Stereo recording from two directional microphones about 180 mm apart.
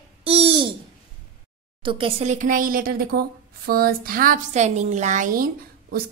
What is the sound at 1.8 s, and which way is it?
A woman's voice, 30° right (ahead or behind).